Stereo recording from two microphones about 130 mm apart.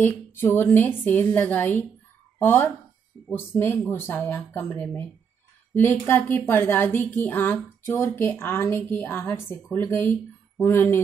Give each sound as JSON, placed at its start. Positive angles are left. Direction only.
{"t": 0.0, "sound": "a woman's voice", "side_deg": 15}